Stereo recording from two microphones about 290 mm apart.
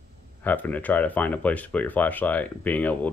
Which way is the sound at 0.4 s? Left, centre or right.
Centre.